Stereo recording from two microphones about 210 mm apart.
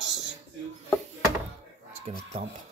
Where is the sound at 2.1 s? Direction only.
30° right (ahead or behind).